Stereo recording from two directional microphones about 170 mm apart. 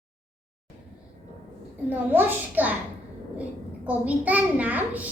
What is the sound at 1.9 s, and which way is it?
Speech, 10° right (ahead or behind).